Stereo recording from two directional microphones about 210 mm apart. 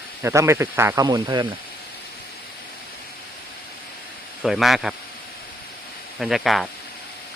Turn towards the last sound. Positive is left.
turn(degrees=0)  # may be behind; listen again after turning